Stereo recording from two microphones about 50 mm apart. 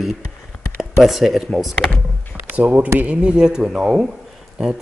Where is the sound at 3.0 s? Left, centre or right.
Right.